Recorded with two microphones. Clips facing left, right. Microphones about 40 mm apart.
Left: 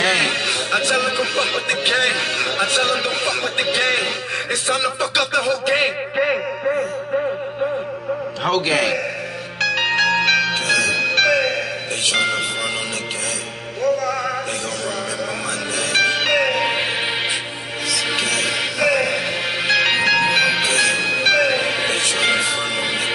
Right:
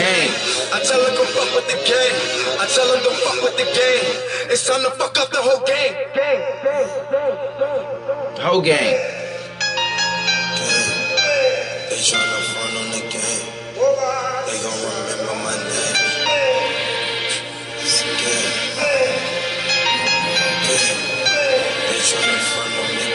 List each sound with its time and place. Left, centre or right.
0.0 s a sound: centre
0.7 s speech: centre
8.5 s a man's voice: centre
9.8 s music: centre
12.1 s speech: centre
13.8 s music: centre
15.9 s music: centre
17.8 s music: left